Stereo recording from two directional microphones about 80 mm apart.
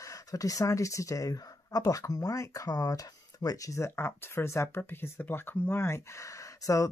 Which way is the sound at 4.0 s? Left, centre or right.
Left.